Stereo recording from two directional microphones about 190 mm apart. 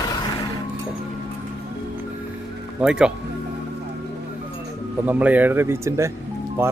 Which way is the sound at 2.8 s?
5° right (ahead or behind).